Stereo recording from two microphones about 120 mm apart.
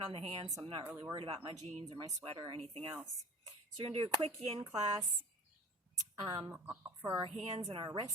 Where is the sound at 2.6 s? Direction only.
50° right (ahead or behind).